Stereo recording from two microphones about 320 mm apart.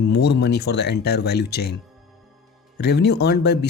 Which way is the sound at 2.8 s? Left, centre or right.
Left.